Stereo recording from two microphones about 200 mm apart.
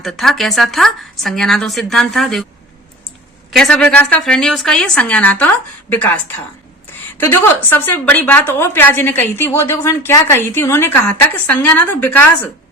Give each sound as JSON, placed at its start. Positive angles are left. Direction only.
{"t": 0.0, "sound": "speech", "side_deg": 0}
{"t": 3.5, "sound": "a woman's voice", "side_deg": 5}